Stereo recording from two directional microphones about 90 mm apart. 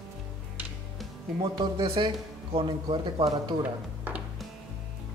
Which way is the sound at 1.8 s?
85° right.